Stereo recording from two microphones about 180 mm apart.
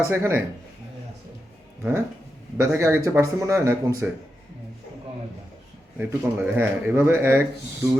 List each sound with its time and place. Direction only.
0.0 s speech: 15° right (ahead or behind)
1.8 s speech: 15° right (ahead or behind)
6.0 s speech: 10° right (ahead or behind)